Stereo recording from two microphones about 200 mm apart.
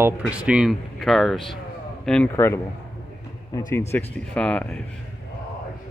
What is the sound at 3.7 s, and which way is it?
Speech, 15° left (ahead or behind).